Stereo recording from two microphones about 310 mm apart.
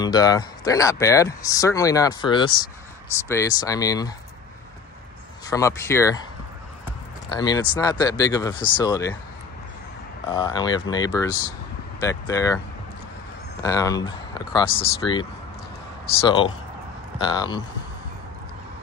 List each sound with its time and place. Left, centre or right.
0.0 s speech: centre
5.5 s speech: centre
7.2 s speech: centre
10.3 s speech: centre
13.6 s speech: centre
16.3 s speech: centre